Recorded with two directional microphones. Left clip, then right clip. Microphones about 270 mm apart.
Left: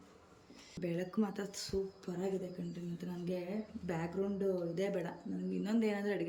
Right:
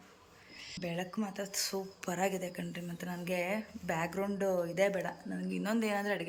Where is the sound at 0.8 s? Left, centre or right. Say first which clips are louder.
Left 1 dB; centre.